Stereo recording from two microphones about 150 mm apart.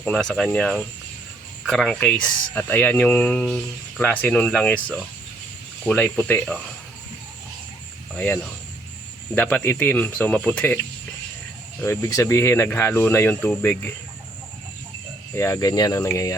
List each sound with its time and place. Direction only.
0.0 s speech: 5° left (ahead or behind)
8.1 s speech: 10° left (ahead or behind)
11.8 s speech: 20° left (ahead or behind)
15.4 s speech: 20° left (ahead or behind)